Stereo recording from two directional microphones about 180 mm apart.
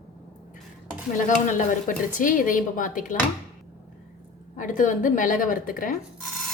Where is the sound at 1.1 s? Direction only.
45° left (ahead or behind).